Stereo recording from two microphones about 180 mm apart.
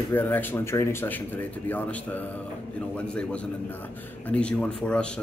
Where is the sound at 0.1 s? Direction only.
10° left (ahead or behind).